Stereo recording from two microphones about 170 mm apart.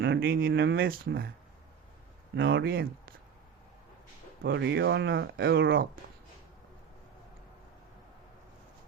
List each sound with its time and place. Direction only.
0.0 s speech: 65° right (ahead or behind)
2.3 s speech: 75° right (ahead or behind)
4.4 s speech: 90° right; by 5.9 s 60° right (ahead or behind)